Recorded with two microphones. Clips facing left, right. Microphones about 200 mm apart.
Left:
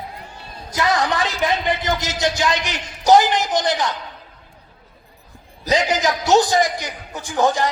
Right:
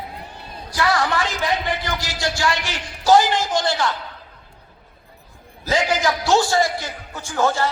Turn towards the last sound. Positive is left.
turn(degrees=15)  # may be behind; listen again after turning